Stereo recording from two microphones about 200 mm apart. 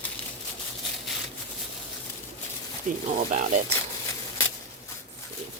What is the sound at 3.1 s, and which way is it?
Speech, 40° right (ahead or behind).